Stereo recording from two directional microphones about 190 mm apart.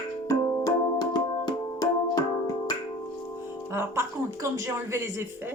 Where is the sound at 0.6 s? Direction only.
20° left (ahead or behind).